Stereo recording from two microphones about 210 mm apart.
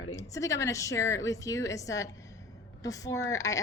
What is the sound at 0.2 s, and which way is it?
A woman's voice, 15° left (ahead or behind).